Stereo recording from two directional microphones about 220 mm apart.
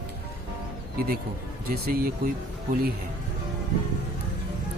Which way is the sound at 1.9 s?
40° right (ahead or behind).